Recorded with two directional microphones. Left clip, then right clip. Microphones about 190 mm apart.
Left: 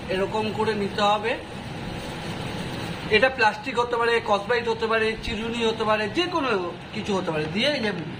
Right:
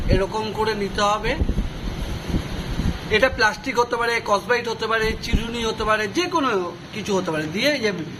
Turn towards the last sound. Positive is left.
turn(degrees=-20)  # may be behind; listen again after turning